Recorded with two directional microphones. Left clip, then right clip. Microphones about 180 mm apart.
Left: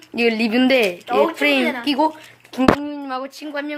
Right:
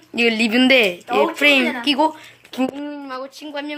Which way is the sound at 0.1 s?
Centre (ahead or behind).